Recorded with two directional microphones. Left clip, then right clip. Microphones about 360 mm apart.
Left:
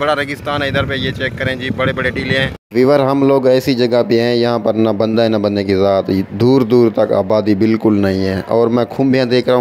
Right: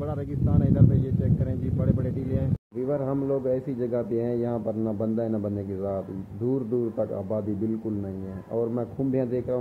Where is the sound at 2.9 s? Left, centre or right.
Left.